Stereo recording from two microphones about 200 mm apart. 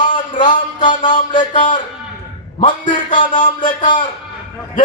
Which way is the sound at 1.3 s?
25° left (ahead or behind).